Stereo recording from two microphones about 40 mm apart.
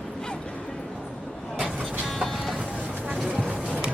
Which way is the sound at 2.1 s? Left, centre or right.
Centre.